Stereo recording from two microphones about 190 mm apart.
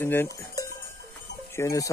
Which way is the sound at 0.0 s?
10° left (ahead or behind).